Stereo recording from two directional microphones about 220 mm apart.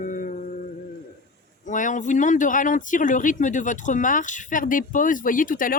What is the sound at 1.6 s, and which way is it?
Speech, 35° left (ahead or behind).